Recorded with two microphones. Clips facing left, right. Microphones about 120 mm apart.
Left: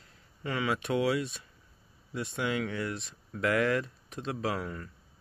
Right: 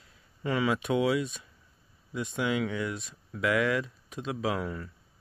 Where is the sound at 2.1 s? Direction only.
15° right (ahead or behind).